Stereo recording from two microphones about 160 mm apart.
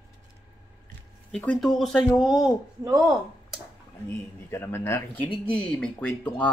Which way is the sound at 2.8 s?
20° right (ahead or behind).